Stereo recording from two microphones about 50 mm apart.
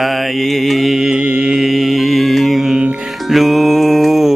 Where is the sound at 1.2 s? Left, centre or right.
Right.